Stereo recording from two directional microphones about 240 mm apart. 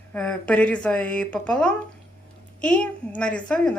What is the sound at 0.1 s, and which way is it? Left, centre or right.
A woman's voice, centre.